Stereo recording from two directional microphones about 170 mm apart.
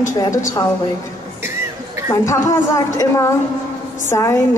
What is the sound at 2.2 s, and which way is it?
A woman's voice, 20° left (ahead or behind).